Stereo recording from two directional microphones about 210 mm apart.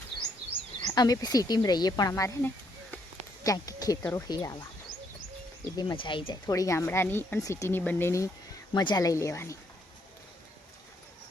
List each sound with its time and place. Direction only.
0.8 s speech: 20° left (ahead or behind)
5.7 s speech: 20° left (ahead or behind)